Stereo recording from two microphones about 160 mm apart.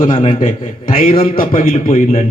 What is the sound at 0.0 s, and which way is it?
A man's voice, 55° left (ahead or behind).